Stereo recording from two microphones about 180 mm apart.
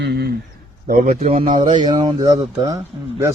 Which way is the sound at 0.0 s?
65° right (ahead or behind).